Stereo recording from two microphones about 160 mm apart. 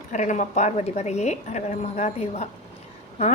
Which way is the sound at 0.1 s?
50° left (ahead or behind).